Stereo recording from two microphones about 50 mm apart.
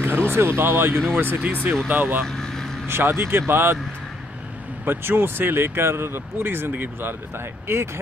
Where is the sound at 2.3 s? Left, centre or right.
Centre.